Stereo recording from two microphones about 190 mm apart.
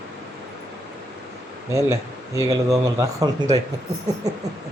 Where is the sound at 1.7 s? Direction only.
15° right (ahead or behind).